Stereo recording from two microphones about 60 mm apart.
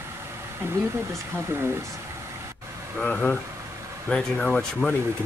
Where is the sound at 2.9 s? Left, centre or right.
Centre.